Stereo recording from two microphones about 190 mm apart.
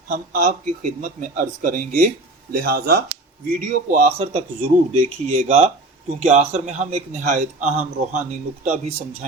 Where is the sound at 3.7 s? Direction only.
40° right (ahead or behind).